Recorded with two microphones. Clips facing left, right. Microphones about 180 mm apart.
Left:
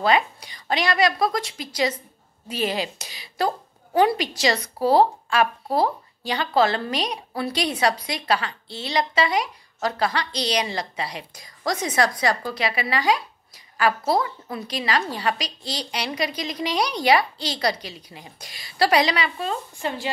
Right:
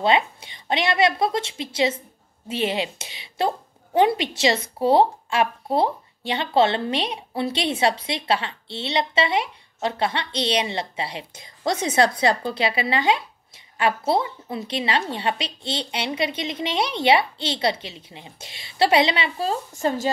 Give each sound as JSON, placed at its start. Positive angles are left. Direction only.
{"t": 0.0, "sound": "a woman's voice", "side_deg": -25}